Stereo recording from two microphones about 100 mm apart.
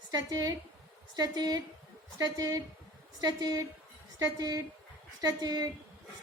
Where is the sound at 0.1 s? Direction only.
40° right (ahead or behind).